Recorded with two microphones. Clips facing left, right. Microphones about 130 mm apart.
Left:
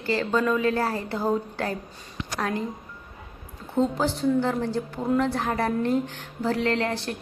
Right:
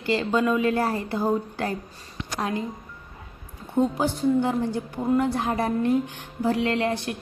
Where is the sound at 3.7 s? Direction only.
15° right (ahead or behind).